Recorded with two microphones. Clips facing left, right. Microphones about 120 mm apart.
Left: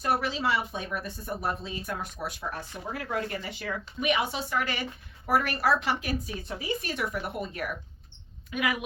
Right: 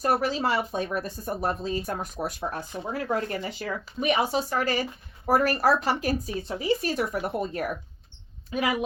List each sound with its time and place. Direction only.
0.0 s speech: 40° right (ahead or behind)